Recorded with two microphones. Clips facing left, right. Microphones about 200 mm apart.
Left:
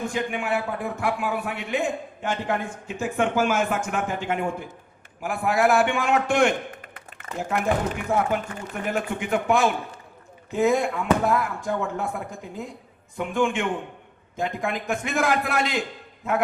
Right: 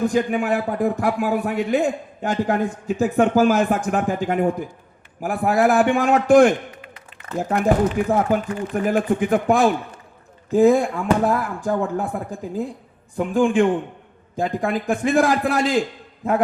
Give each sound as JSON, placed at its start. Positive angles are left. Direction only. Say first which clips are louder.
{"t": 0.0, "sound": "speech", "louder": "right 8 dB", "side_deg": -35}
{"t": 6.8, "sound": "a sound", "louder": "right 2 dB", "side_deg": 50}
{"t": 7.3, "sound": "speech", "louder": "right 6 dB", "side_deg": -35}